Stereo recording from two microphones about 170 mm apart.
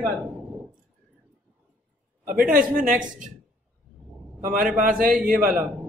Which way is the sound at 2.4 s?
55° right (ahead or behind).